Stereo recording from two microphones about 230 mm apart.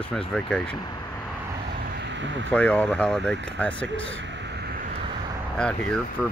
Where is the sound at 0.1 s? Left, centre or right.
Centre.